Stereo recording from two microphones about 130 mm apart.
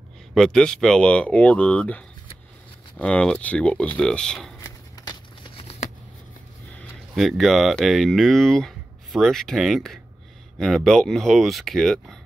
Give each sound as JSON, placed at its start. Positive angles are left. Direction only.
{"t": 0.3, "sound": "speech", "side_deg": 5}
{"t": 4.6, "sound": "a sound", "side_deg": 30}
{"t": 5.6, "sound": "shuffling cards", "side_deg": 50}
{"t": 7.2, "sound": "speech", "side_deg": 0}